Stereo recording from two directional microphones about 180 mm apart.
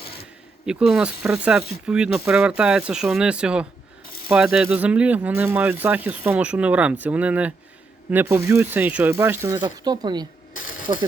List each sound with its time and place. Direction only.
0.6 s speech: 5° right (ahead or behind); by 11.0 s 20° right (ahead or behind)